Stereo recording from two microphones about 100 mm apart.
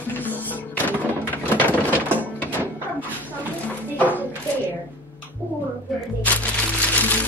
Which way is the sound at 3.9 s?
15° left (ahead or behind).